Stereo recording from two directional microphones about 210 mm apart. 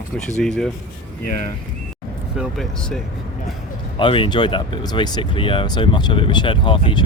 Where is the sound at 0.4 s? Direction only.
5° left (ahead or behind).